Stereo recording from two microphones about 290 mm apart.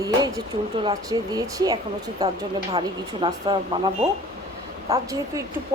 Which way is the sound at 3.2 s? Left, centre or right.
Centre.